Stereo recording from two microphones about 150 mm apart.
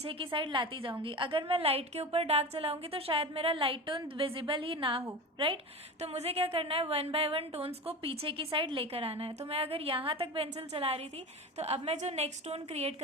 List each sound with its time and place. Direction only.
0.0 s a woman's voice: 35° right (ahead or behind)